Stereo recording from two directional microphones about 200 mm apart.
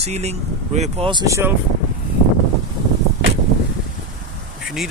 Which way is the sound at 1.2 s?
15° right (ahead or behind).